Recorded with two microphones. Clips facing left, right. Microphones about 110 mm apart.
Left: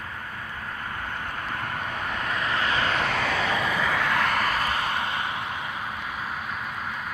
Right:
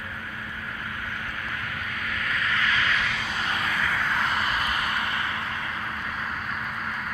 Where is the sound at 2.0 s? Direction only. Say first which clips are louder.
Even; 35° left (ahead or behind).